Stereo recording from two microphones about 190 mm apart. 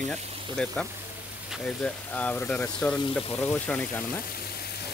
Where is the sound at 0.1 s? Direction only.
5° left (ahead or behind).